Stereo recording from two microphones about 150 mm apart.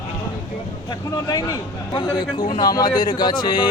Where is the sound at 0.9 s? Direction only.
25° left (ahead or behind).